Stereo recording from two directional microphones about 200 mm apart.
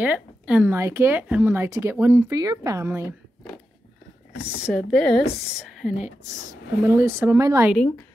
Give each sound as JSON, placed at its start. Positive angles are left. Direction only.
{"t": 0.0, "sound": "speech", "side_deg": -5}
{"t": 4.4, "sound": "speech", "side_deg": -5}
{"t": 6.3, "sound": "speech", "side_deg": -15}
{"t": 7.7, "sound": "speech", "side_deg": 5}